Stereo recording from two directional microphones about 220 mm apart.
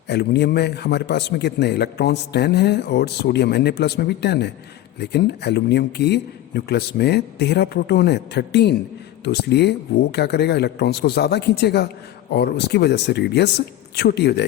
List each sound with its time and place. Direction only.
0.1 s a man's voice: 50° left (ahead or behind)